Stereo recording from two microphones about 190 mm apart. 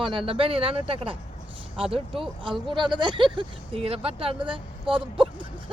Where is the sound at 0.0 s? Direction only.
25° right (ahead or behind).